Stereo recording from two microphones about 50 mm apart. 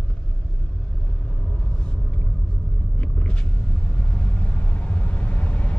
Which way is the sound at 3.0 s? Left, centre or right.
Left.